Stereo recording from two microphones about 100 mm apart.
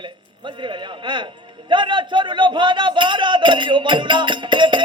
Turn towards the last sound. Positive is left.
turn(degrees=-55)  # may be behind; listen again after turning